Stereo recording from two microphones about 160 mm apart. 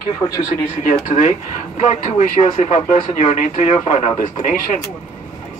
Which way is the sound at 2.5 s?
40° left (ahead or behind).